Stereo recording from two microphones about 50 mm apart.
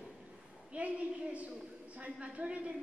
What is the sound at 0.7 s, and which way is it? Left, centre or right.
A woman's voice, right.